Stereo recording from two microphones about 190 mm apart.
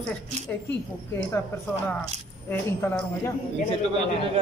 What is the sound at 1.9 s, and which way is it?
Speech, 10° left (ahead or behind).